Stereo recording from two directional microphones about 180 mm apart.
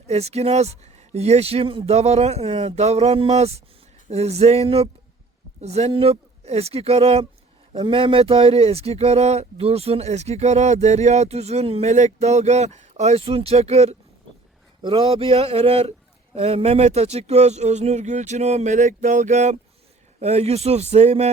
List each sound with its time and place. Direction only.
0.1 s speech: 35° right (ahead or behind)